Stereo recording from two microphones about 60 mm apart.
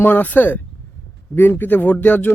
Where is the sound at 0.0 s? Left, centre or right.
Left.